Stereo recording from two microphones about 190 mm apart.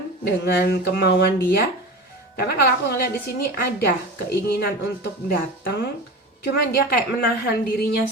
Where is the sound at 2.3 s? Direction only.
55° left (ahead or behind).